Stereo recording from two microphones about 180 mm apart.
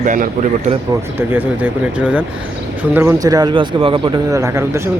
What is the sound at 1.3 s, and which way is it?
Speech, 10° right (ahead or behind).